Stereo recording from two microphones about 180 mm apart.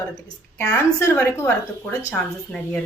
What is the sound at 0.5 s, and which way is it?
A woman's voice, 15° left (ahead or behind).